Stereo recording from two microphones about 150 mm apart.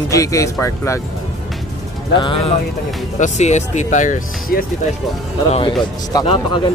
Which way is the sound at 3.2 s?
50° left (ahead or behind).